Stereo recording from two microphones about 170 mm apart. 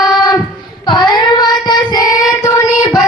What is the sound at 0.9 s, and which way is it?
Child singing, 25° left (ahead or behind).